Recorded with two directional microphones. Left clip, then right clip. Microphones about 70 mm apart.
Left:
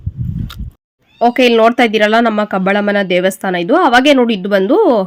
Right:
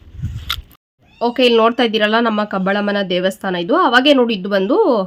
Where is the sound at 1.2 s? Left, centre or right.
Left.